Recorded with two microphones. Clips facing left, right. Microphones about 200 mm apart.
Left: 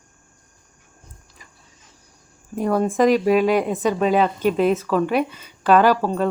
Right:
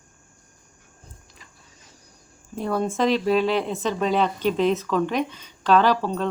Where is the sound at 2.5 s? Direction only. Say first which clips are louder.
Left 5 dB; 10° left (ahead or behind).